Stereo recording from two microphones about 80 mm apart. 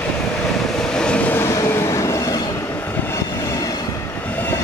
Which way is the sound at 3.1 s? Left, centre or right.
Left.